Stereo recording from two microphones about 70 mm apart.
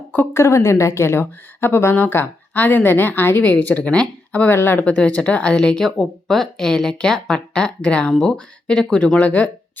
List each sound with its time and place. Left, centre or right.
0.3 s a woman's voice: left; by 9.5 s centre